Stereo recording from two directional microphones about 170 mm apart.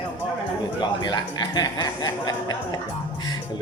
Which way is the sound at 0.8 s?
25° left (ahead or behind).